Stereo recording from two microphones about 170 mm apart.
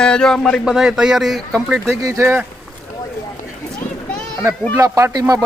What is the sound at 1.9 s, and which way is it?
Speech, 15° right (ahead or behind).